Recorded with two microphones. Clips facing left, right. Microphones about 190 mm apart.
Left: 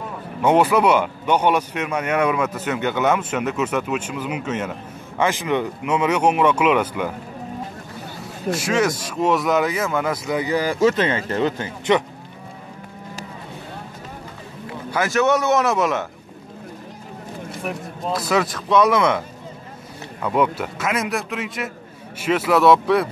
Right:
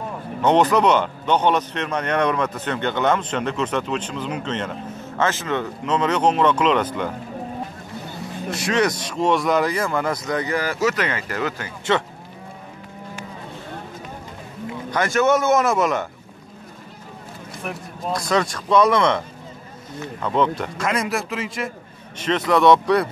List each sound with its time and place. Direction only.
0.4 s speech: 10° left (ahead or behind)
8.5 s speech: 5° left (ahead or behind)
10.8 s speech: 25° left (ahead or behind)
14.9 s speech: 5° left (ahead or behind)
18.1 s speech: 5° left (ahead or behind)